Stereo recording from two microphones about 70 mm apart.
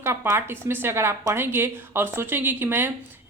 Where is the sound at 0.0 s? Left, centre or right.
Right.